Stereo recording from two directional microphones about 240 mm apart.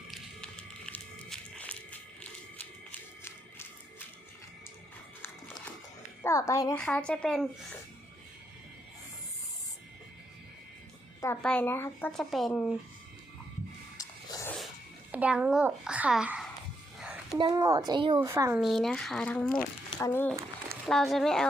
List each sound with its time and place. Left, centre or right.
0.1 s a sound: centre
6.2 s a woman's voice: centre
11.2 s speech: centre
14.0 s a sound: centre
15.1 s a child's voice: centre
17.3 s speech: centre
18.6 s a woman's voice: centre